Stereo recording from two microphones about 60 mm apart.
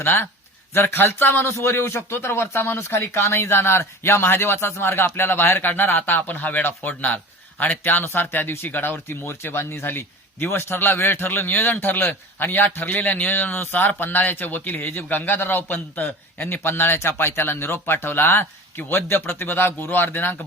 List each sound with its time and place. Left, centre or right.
0.0 s speech: left
6.1 s speech: left